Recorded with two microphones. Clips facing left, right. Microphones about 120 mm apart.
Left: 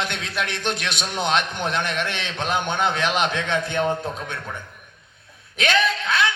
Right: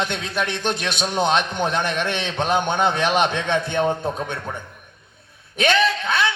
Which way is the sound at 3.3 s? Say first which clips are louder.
Right 2 dB; 20° right (ahead or behind).